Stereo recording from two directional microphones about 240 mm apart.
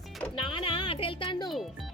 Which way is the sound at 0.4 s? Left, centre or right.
Left.